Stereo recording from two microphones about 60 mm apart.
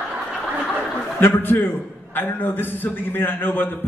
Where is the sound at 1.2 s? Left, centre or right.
Left.